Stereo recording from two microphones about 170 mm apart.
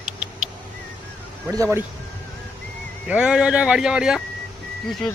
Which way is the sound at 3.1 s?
5° right (ahead or behind).